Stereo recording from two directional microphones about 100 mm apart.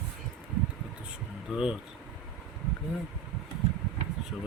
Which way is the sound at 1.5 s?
10° right (ahead or behind).